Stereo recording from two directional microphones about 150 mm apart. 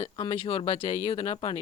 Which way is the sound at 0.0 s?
35° left (ahead or behind).